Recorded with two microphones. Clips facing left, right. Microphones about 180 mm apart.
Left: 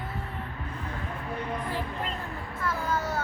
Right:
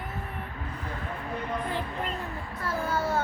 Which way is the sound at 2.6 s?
25° right (ahead or behind).